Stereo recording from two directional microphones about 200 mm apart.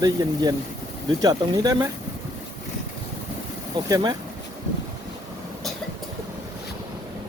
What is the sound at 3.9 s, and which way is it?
Speech, 20° right (ahead or behind).